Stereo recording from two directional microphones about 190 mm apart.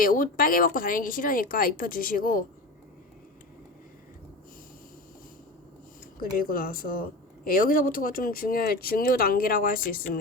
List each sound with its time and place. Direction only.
0.0 s speech: 45° left (ahead or behind)
6.3 s speech: 50° left (ahead or behind)